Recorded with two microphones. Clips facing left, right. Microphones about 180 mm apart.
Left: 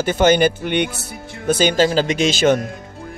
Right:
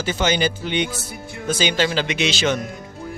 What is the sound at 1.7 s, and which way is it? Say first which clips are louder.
Speech: left 5 dB; 40° left (ahead or behind).